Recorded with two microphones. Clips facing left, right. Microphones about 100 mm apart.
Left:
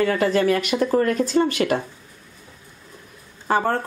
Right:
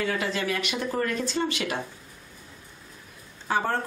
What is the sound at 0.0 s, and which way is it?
Speech, 50° left (ahead or behind).